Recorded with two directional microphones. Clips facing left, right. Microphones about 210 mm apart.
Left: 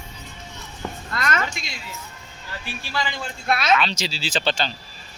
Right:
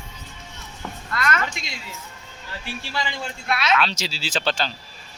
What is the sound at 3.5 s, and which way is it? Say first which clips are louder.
Speech: left 3 dB; 45° left (ahead or behind).